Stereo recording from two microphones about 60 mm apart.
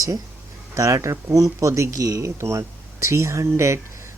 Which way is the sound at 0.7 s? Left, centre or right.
Right.